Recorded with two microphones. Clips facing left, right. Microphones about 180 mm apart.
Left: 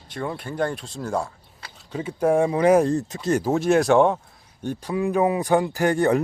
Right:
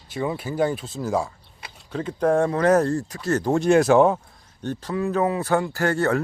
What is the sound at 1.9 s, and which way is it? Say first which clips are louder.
Speech: even; 10° left (ahead or behind).